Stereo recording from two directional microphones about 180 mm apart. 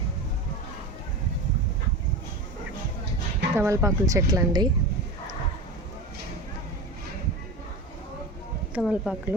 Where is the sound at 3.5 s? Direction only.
15° right (ahead or behind).